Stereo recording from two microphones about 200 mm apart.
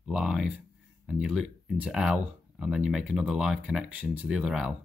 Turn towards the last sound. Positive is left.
turn(degrees=-5)  # may be behind; listen again after turning